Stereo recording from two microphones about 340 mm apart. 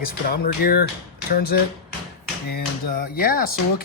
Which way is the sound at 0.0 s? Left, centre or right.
Left.